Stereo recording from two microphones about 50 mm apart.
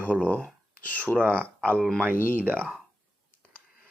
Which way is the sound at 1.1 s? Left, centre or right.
Right.